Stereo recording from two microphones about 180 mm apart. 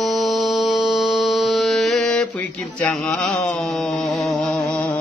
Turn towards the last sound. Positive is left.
turn(degrees=10)  # may be behind; listen again after turning